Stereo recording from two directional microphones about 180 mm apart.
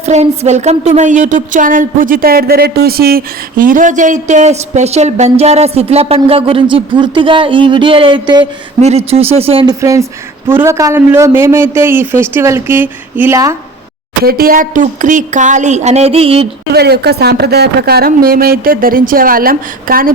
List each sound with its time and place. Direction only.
0.0 s a woman's voice: 40° right (ahead or behind)
8.8 s a woman's voice: 35° right (ahead or behind)
9.8 s a man's voice: 20° right (ahead or behind)
14.3 s speech: 55° right (ahead or behind); by 16.5 s 30° right (ahead or behind)
16.7 s speech: 65° right (ahead or behind)